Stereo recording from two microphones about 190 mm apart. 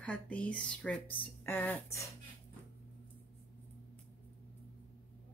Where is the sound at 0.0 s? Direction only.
5° left (ahead or behind).